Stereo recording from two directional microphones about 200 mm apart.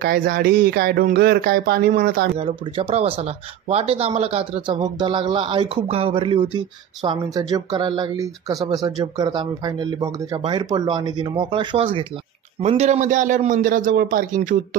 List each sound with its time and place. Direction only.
0.0 s speech: 50° right (ahead or behind)
2.3 s a man's voice: 30° right (ahead or behind)